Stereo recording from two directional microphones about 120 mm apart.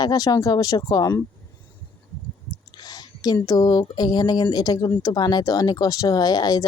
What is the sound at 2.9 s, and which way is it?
Speech, 35° left (ahead or behind).